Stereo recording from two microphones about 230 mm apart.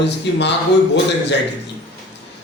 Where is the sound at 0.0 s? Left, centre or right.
Left.